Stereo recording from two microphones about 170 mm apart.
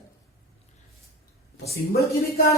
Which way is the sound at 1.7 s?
65° left (ahead or behind).